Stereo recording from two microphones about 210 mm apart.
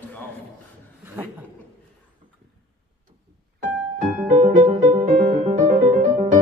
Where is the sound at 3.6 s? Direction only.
40° right (ahead or behind).